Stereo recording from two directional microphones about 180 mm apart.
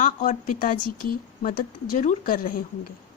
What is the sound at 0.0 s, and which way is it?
Speech, 45° left (ahead or behind).